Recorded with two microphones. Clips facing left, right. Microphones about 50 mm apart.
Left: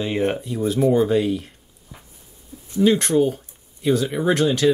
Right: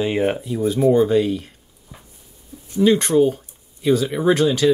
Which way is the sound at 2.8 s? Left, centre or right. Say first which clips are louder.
Right 2 dB; centre.